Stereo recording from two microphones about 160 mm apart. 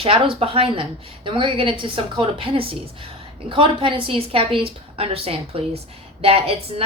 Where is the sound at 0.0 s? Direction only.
35° right (ahead or behind).